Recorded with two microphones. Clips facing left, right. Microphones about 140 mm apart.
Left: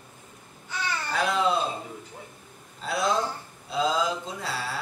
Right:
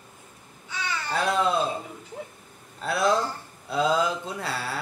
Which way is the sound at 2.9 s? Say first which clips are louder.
Right 2 dB; 55° right (ahead or behind).